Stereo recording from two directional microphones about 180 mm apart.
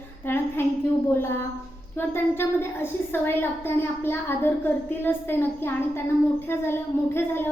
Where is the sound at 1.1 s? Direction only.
15° left (ahead or behind).